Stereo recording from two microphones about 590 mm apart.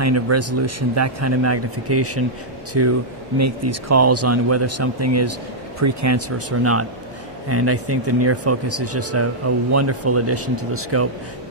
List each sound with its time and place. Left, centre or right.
0.0 s speech: right